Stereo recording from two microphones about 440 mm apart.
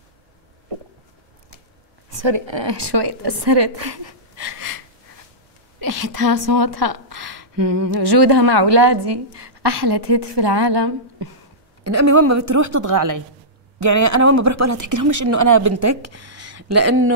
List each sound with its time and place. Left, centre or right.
2.2 s a woman's voice: right
5.8 s a woman's voice: right
11.8 s speech: right